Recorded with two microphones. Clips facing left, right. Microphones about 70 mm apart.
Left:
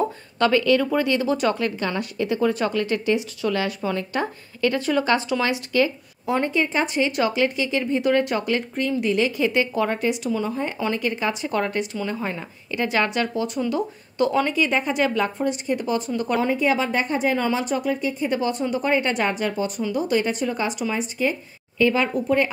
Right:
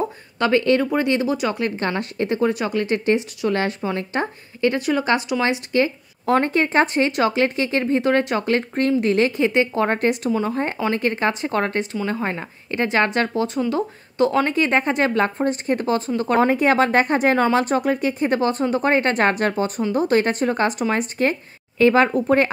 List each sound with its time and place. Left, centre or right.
0.5 s speech: right
1.3 s speech: centre
1.8 s a woman's voice: right; by 5.4 s centre
5.4 s a woman's voice: right
6.2 s speech: right
7.1 s a woman's voice: right
8.2 s speech: right
8.5 s speech: right
9.4 s a woman's voice: right
9.8 s a woman's voice: right
13.7 s a woman's voice: right
16.3 s a woman's voice: right
17.6 s speech: right
21.7 s a woman's voice: right